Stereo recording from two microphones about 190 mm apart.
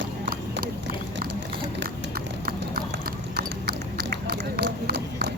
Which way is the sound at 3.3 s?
60° right (ahead or behind).